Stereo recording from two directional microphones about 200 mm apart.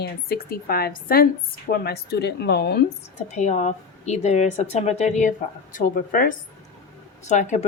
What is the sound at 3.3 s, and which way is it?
A woman's voice, 35° left (ahead or behind).